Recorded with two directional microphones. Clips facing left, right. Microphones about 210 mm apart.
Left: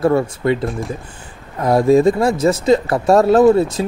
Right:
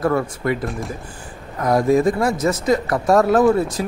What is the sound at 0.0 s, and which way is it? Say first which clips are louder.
Speech: left 4 dB; 25° left (ahead or behind).